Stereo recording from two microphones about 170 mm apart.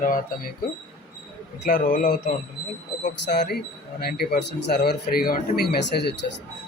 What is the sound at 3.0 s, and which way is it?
Speech, 80° left.